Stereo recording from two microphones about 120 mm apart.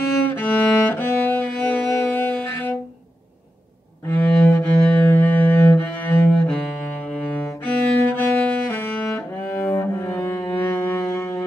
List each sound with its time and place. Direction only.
0.3 s music: 15° left (ahead or behind)
4.1 s cello: 15° left (ahead or behind)
9.0 s music: 10° left (ahead or behind)